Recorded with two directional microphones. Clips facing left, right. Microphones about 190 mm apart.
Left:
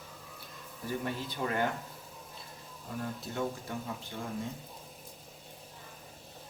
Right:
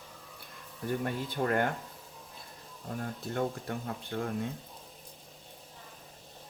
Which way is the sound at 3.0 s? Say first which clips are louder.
Right 2 dB; 55° right (ahead or behind).